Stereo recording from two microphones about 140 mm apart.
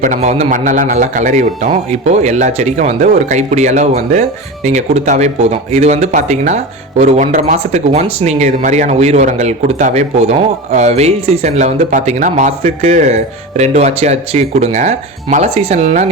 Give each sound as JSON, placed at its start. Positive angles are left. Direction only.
{"t": 0.2, "sound": "a man's voice", "side_deg": -50}
{"t": 7.6, "sound": "speech", "side_deg": -50}